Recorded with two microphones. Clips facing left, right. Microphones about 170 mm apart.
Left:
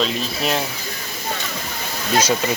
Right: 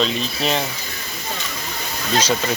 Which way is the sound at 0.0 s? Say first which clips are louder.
Right 1 dB; 5° left (ahead or behind).